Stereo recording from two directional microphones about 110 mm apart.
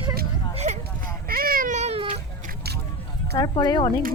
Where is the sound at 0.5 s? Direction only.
90° right.